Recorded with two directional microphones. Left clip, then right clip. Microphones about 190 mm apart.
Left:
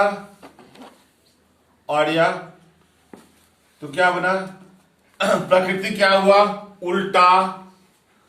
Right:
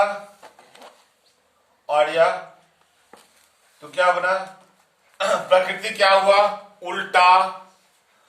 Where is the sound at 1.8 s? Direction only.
Centre (ahead or behind).